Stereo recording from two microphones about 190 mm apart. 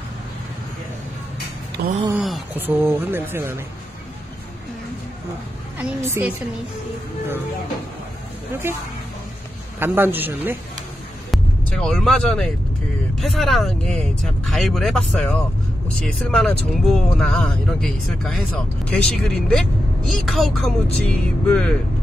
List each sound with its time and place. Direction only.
1.8 s a sound: 55° right (ahead or behind)
2.1 s speech: 5° right (ahead or behind)
6.0 s speech: 10° right (ahead or behind)
8.6 s speech: 10° right (ahead or behind)
11.2 s speech: centre (ahead or behind)